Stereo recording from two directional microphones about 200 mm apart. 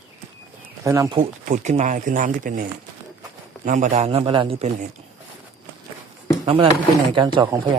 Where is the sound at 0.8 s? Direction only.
15° right (ahead or behind).